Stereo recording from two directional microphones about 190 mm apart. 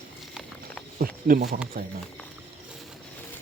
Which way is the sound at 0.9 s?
50° right (ahead or behind).